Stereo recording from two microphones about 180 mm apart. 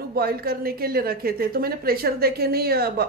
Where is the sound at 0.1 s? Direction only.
55° right (ahead or behind).